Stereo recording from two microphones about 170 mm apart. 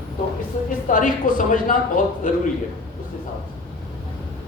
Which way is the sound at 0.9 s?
50° left (ahead or behind).